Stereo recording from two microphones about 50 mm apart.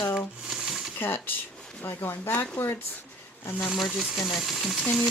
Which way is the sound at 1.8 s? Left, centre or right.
Left.